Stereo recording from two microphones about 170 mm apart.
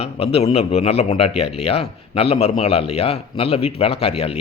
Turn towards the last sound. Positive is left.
turn(degrees=35)  # may be behind; listen again after turning